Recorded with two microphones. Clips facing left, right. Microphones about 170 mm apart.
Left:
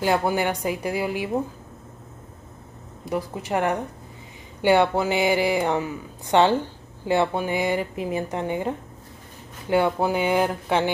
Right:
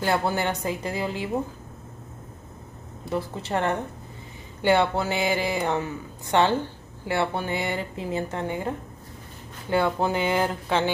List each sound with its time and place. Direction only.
0.0 s speech: 15° left (ahead or behind)
3.1 s speech: 15° left (ahead or behind)